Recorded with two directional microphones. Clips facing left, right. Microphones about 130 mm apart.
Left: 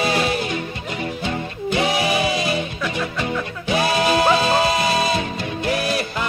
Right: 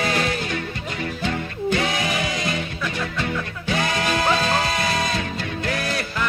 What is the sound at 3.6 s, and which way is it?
Music, 20° left (ahead or behind).